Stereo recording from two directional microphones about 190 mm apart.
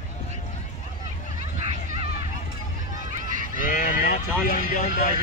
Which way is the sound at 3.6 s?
45° left (ahead or behind).